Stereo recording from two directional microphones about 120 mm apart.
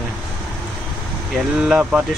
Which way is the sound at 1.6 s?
10° right (ahead or behind).